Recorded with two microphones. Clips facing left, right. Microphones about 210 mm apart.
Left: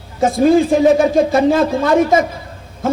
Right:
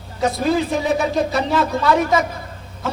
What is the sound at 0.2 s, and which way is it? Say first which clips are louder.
A man's voice: left 7 dB; 50° left (ahead or behind).